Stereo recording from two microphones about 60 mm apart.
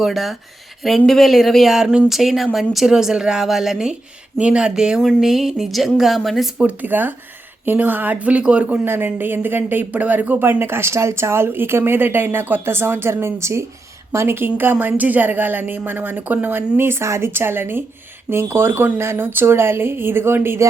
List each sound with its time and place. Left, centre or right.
0.0 s speech: centre
6.6 s speech: right
8.8 s speech: right